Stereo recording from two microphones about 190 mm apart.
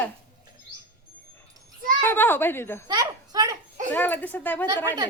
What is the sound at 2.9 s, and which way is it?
Speech, 20° right (ahead or behind).